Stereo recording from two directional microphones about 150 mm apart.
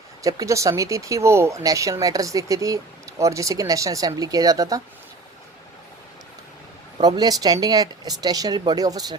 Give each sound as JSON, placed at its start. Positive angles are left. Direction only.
{"t": 0.2, "sound": "speech", "side_deg": -20}
{"t": 7.0, "sound": "speech", "side_deg": -25}